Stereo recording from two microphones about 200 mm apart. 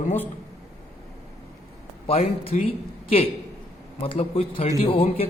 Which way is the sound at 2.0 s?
30° left (ahead or behind).